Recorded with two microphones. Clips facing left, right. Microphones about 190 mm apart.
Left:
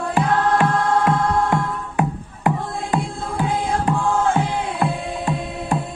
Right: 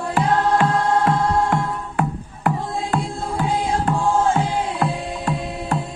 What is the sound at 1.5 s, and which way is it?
Music, 15° left (ahead or behind).